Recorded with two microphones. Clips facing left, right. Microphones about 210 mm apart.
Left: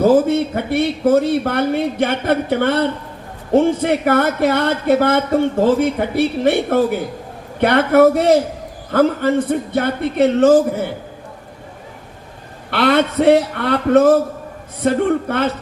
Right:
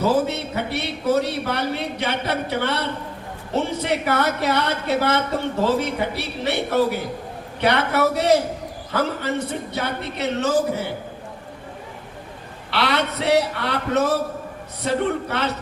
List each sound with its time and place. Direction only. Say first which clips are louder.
0.0 s speech: left 8 dB; 50° left (ahead or behind)
12.7 s speech: left 8 dB; 50° left (ahead or behind)